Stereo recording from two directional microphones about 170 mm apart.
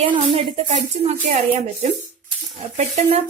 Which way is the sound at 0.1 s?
35° right (ahead or behind).